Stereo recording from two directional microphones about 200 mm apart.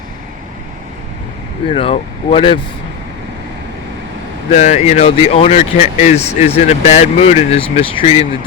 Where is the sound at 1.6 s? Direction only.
25° left (ahead or behind).